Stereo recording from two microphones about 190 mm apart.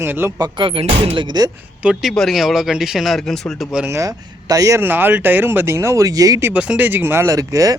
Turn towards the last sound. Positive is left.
turn(degrees=-15)  # may be behind; listen again after turning